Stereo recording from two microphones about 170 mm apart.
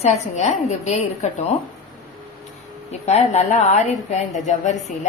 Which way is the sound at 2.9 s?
40° left (ahead or behind).